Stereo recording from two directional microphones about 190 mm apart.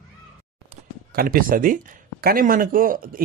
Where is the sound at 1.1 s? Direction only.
50° right (ahead or behind).